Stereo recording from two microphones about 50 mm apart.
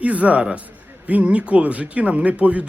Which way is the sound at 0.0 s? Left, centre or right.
Right.